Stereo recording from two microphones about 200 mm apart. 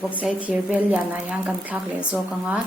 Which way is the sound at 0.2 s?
5° right (ahead or behind).